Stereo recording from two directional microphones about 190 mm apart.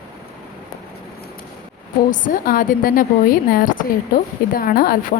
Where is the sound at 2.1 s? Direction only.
45° left (ahead or behind).